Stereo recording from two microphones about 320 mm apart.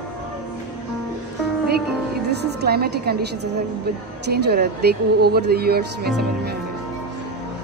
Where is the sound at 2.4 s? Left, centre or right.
Right.